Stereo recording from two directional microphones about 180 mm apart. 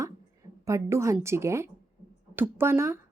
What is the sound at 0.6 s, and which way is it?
A woman's voice, 15° right (ahead or behind).